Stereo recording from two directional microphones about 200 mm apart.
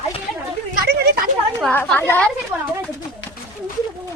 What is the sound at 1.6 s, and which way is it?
Speech, 5° left (ahead or behind).